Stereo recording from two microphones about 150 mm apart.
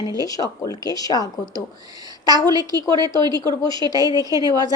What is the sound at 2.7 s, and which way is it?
Speech, 30° right (ahead or behind).